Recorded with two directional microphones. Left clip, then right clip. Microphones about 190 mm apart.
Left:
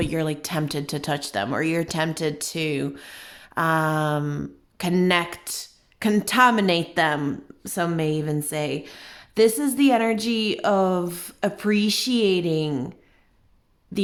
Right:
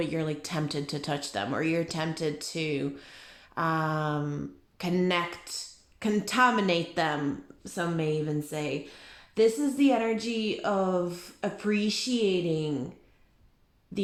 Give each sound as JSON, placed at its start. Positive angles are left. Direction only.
{"t": 0.0, "sound": "speech", "side_deg": 35}